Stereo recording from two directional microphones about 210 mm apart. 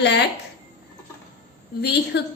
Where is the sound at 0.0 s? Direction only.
55° left (ahead or behind).